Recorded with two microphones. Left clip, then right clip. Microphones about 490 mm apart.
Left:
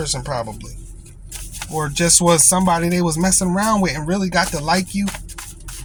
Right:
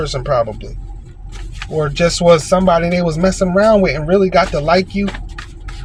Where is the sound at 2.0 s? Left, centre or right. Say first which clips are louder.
Right 5 dB; left.